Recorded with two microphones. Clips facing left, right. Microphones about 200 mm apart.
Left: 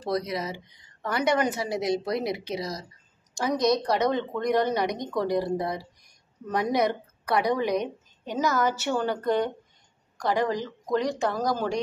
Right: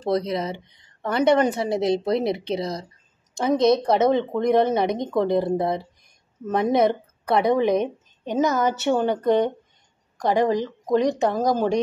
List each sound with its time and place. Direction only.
0.0 s a woman's voice: 25° right (ahead or behind)